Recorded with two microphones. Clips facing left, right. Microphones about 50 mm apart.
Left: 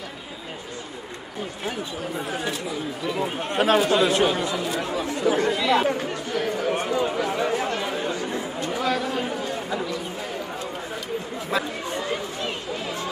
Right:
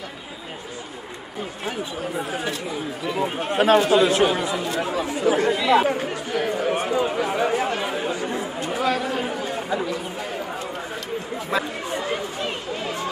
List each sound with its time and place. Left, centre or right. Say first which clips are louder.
2.1 s speech: right 1 dB; centre
9.4 s chatter: right 2 dB; centre
11.5 s chatter: right 1 dB; centre